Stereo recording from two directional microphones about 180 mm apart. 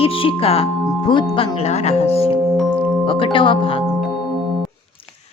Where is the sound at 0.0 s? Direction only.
30° left (ahead or behind).